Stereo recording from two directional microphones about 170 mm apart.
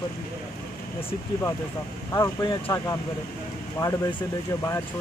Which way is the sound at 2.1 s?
20° left (ahead or behind).